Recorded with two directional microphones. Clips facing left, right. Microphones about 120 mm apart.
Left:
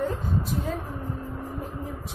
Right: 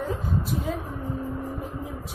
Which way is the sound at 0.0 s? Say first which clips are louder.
Left 1 dB; centre (ahead or behind).